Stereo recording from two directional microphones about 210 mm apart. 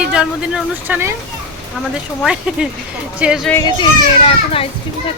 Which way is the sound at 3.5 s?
15° left (ahead or behind).